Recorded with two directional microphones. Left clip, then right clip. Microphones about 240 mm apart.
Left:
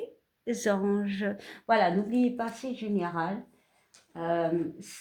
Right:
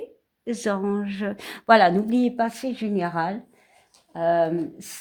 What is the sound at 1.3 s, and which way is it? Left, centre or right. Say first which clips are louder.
Speech: right 8 dB; right.